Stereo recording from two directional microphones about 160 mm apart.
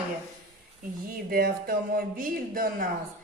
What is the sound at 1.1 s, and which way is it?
Speech, 65° right (ahead or behind).